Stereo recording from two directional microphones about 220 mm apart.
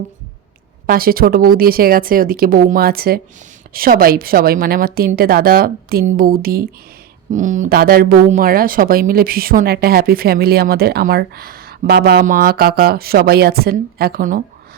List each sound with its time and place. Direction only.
0.9 s speech: 40° right (ahead or behind)